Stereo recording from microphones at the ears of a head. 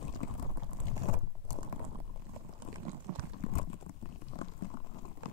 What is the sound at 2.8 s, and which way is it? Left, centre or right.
Boiling, right.